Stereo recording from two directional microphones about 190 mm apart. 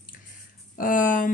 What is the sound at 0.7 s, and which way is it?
Speech, 45° left (ahead or behind).